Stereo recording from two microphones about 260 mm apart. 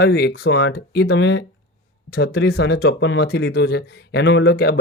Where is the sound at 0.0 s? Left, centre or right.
Left.